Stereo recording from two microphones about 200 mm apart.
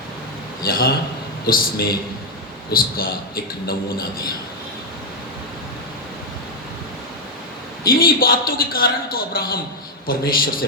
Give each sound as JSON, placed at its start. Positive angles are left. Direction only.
{"t": 0.6, "sound": "a man's voice", "side_deg": 50}
{"t": 7.9, "sound": "a man's voice", "side_deg": 50}